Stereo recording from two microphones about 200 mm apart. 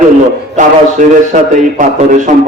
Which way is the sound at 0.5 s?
40° right (ahead or behind).